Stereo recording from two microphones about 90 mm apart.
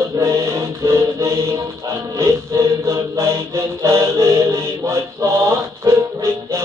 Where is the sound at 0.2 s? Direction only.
30° right (ahead or behind).